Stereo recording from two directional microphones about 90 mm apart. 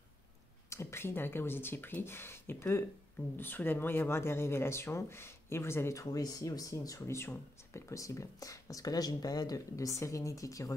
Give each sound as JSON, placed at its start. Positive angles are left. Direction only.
{"t": 0.7, "sound": "speech", "side_deg": 30}